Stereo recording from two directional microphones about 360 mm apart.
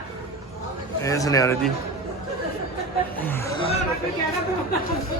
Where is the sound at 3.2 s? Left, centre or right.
Centre.